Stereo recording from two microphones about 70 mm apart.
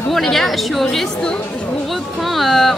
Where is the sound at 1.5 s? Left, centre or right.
Centre.